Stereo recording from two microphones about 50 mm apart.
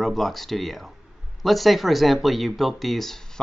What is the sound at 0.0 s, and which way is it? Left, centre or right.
Speech, centre.